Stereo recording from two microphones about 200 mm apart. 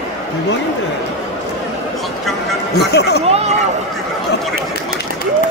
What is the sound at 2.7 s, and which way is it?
Chatter, 55° left (ahead or behind).